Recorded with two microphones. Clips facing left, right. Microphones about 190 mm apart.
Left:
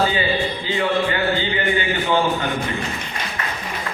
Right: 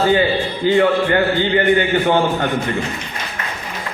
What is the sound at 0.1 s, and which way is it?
A man's voice, 55° right (ahead or behind).